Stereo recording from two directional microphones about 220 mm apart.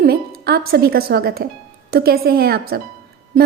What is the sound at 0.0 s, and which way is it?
Speech, 45° right (ahead or behind).